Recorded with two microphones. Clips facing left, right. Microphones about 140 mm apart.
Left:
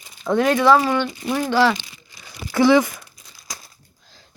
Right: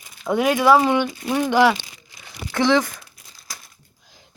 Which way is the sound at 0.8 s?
20° right (ahead or behind).